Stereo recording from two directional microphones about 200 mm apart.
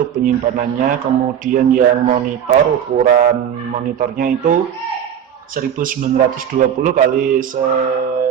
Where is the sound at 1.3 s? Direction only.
40° right (ahead or behind).